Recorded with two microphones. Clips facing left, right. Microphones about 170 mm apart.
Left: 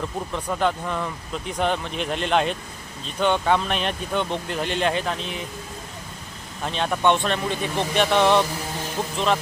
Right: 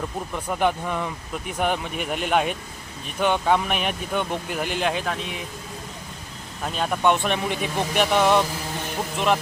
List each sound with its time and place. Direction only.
0.3 s speech: 10° right (ahead or behind)
6.7 s speech: 5° right (ahead or behind)